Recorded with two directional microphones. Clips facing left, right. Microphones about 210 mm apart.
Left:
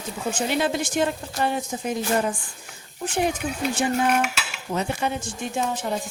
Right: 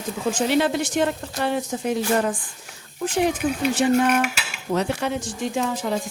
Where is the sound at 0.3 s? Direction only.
80° right.